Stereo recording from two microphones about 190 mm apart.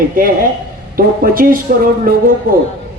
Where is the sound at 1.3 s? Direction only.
50° right (ahead or behind).